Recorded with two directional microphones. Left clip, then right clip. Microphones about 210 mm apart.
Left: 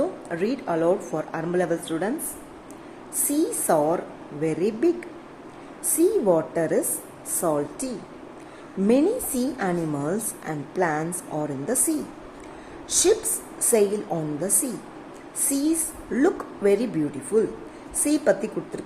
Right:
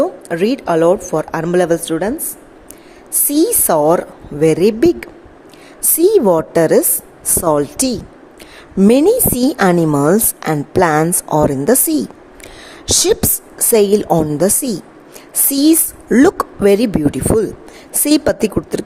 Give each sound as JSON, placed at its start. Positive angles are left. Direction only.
{"t": 0.0, "sound": "a woman's voice", "side_deg": -45}
{"t": 3.2, "sound": "a woman's voice", "side_deg": -50}